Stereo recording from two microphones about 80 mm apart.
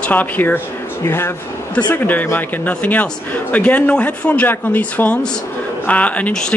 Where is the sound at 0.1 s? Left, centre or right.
Left.